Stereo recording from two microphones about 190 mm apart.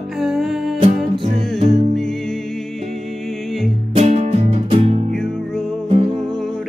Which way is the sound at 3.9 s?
35° right (ahead or behind).